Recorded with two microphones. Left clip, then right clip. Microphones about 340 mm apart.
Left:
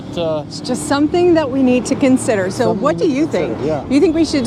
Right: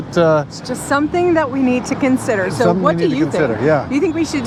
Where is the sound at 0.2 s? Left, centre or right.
Right.